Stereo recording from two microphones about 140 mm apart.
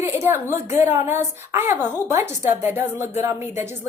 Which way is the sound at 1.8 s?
25° left (ahead or behind).